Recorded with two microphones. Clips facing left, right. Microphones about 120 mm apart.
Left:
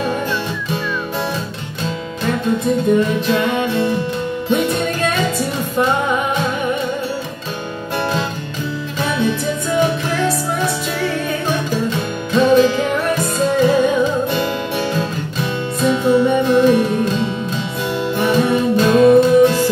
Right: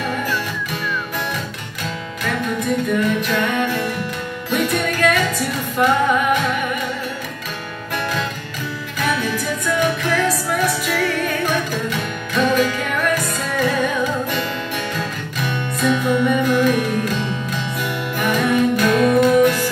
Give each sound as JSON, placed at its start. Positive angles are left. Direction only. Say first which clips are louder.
{"t": 2.2, "sound": "music", "louder": "left 4 dB", "side_deg": 30}
{"t": 9.0, "sound": "music", "louder": "left 3 dB", "side_deg": 25}